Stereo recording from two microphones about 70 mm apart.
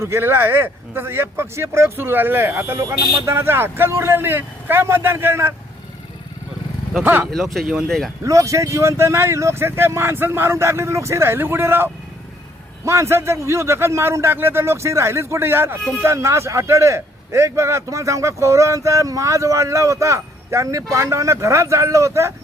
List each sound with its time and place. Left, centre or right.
0.0 s speech: right
7.0 s speech: right
7.3 s speech: centre
8.2 s a man's voice: right